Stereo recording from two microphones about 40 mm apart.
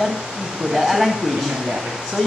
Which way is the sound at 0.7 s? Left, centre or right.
Centre.